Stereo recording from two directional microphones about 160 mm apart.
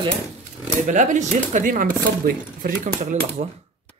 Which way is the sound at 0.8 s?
50° right (ahead or behind).